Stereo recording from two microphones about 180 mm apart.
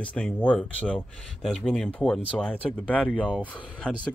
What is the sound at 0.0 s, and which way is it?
Speech, 5° left (ahead or behind).